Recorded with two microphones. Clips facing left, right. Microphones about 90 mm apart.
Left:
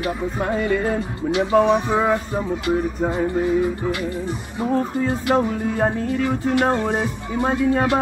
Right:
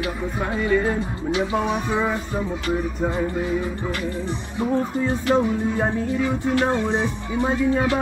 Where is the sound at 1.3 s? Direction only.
85° left.